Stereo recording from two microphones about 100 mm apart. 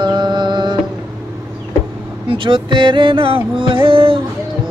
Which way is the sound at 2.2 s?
60° right (ahead or behind).